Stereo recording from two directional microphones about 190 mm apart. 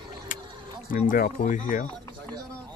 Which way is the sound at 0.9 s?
45° left (ahead or behind).